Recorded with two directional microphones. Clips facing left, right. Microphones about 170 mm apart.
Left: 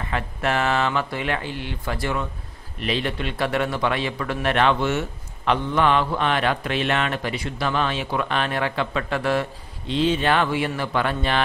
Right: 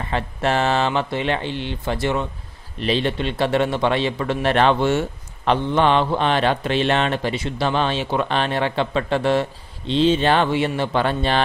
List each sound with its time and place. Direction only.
0.1 s a man's voice: 30° right (ahead or behind)